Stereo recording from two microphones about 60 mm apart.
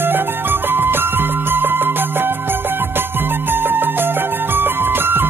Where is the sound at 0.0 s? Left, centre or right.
Right.